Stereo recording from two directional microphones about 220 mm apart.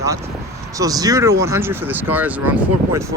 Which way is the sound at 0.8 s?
15° right (ahead or behind).